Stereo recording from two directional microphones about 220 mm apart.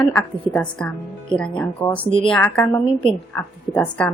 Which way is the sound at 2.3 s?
5° left (ahead or behind).